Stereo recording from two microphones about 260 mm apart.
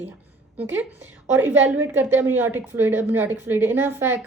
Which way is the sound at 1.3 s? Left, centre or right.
Centre.